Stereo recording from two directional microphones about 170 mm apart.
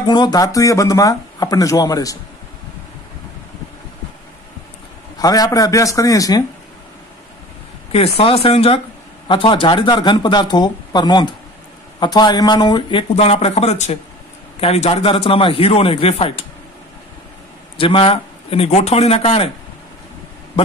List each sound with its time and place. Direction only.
0.0 s speech: 25° left (ahead or behind)
5.1 s speech: 20° left (ahead or behind)
7.9 s speech: 35° left (ahead or behind)
13.1 s speech: 40° left (ahead or behind)
17.7 s speech: 30° left (ahead or behind)